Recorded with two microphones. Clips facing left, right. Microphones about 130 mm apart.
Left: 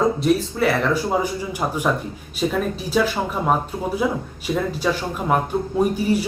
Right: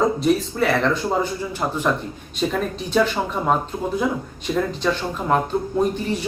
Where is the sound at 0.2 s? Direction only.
Centre (ahead or behind).